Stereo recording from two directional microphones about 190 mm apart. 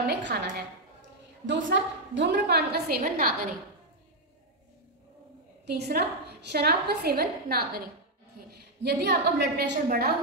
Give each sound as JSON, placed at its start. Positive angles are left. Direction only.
{"t": 0.0, "sound": "a sound", "side_deg": -60}
{"t": 1.4, "sound": "a woman's voice", "side_deg": -75}
{"t": 5.7, "sound": "a woman's voice", "side_deg": -60}
{"t": 8.8, "sound": "a woman's voice", "side_deg": -60}